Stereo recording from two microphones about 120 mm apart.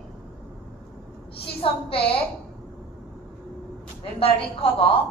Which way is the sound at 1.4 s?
50° left (ahead or behind).